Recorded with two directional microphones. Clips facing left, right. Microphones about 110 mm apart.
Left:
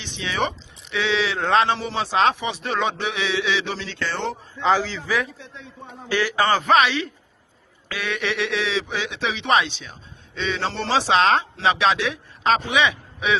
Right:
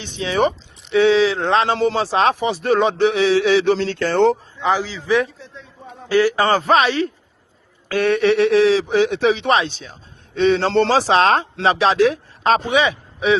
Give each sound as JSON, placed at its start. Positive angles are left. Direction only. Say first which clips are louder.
{"t": 0.2, "sound": "speech", "louder": "right 7 dB", "side_deg": -35}
{"t": 4.6, "sound": "a man's voice", "louder": "even", "side_deg": -15}
{"t": 5.0, "sound": "speech", "louder": "right 7 dB", "side_deg": -25}
{"t": 5.4, "sound": "a man's voice", "louder": "right 1 dB", "side_deg": 0}
{"t": 6.1, "sound": "speech", "louder": "right 5 dB", "side_deg": -35}
{"t": 7.9, "sound": "speech", "louder": "right 11 dB", "side_deg": -45}
{"t": 10.3, "sound": "speech", "louder": "right 11 dB", "side_deg": -50}